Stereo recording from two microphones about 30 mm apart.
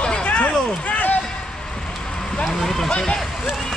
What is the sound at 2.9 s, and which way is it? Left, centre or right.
Speech, left.